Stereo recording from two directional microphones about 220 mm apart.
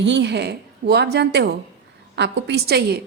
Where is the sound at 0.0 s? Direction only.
55° right (ahead or behind).